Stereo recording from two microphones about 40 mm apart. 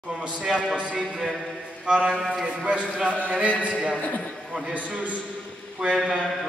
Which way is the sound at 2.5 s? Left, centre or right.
Right.